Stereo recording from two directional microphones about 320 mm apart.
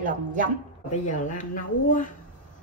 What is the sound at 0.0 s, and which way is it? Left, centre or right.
Speech, right.